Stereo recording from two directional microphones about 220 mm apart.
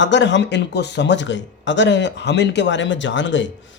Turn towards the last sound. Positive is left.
turn(degrees=55)  # may be behind; listen again after turning